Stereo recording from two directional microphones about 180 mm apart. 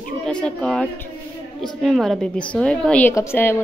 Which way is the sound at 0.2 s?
5° left (ahead or behind).